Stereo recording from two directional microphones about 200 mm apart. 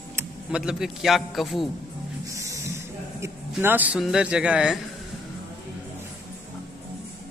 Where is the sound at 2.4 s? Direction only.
15° right (ahead or behind).